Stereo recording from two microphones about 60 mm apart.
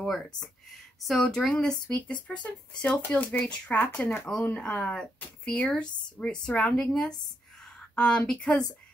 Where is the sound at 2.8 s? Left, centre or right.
Left.